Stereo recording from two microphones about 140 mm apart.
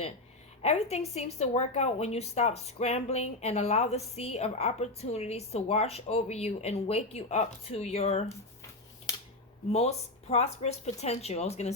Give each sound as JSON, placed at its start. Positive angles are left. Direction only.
{"t": 0.6, "sound": "a woman's voice", "side_deg": 50}
{"t": 9.7, "sound": "a woman's voice", "side_deg": 50}